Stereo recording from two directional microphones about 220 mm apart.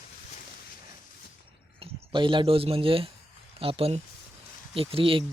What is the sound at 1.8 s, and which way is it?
Speech, 20° right (ahead or behind).